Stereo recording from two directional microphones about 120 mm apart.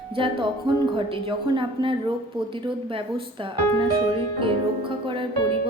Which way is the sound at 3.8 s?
45° right (ahead or behind).